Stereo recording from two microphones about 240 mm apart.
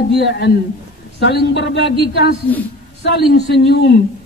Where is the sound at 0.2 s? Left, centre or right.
Left.